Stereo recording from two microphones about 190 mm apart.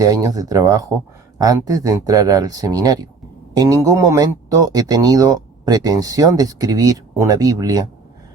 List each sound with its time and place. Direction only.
0.0 s speech: 20° right (ahead or behind)